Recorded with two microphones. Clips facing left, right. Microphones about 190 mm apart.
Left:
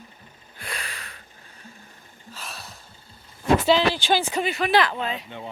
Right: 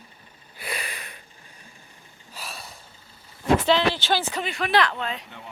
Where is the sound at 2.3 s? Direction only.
5° right (ahead or behind).